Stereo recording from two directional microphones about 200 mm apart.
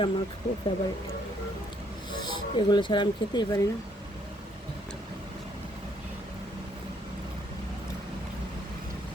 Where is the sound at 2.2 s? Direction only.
20° left (ahead or behind).